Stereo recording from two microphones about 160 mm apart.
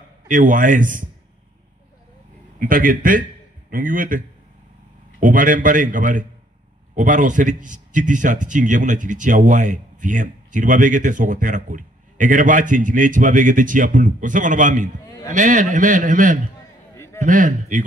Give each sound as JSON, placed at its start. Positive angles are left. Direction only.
{"t": 0.3, "sound": "a man's voice", "side_deg": -55}
{"t": 2.6, "sound": "a man's voice", "side_deg": -60}
{"t": 5.2, "sound": "a man's voice", "side_deg": -55}
{"t": 16.9, "sound": "a sound", "side_deg": 15}
{"t": 17.2, "sound": "speech", "side_deg": -55}